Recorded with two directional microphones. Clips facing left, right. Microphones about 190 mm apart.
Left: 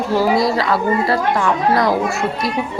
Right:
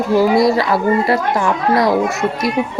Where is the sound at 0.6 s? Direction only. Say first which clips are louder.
Right 2 dB; 25° right (ahead or behind).